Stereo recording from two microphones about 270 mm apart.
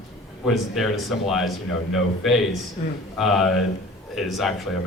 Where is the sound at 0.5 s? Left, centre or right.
Centre.